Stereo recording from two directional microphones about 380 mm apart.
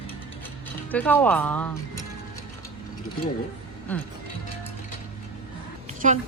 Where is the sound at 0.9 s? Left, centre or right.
Centre.